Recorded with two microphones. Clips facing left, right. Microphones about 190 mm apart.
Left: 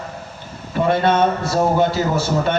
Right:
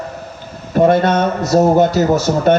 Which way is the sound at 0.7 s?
45° right (ahead or behind).